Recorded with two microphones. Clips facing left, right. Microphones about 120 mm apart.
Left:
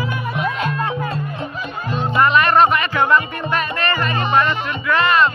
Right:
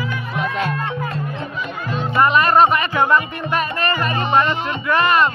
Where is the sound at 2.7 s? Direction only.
40° right (ahead or behind).